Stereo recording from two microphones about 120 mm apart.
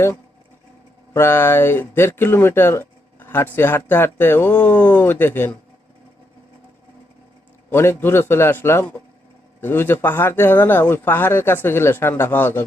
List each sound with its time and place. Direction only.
1.1 s speech: 20° left (ahead or behind)
7.7 s speech: 20° left (ahead or behind)